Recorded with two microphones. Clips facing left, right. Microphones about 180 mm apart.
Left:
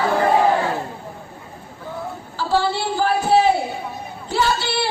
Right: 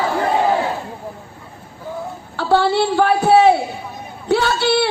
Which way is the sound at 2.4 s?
65° right (ahead or behind).